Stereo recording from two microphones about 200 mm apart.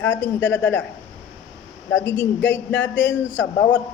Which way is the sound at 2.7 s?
65° left (ahead or behind).